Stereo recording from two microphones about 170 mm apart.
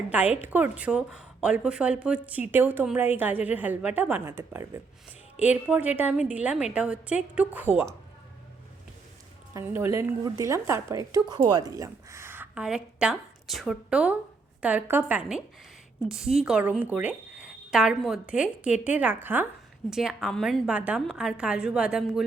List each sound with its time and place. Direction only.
0.1 s a woman's voice: 10° right (ahead or behind)
9.5 s a woman's voice: 15° right (ahead or behind)